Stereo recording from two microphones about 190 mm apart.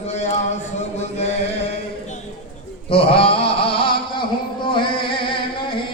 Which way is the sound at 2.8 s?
30° left (ahead or behind).